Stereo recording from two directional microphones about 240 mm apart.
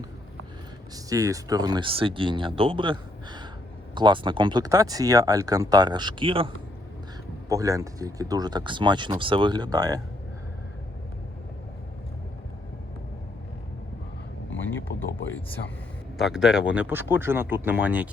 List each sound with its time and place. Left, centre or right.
0.9 s speech: centre
7.5 s speech: centre
14.7 s a sound: centre
16.1 s speech: centre